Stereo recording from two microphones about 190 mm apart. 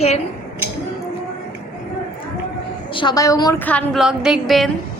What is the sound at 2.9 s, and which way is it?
Speech, 25° left (ahead or behind).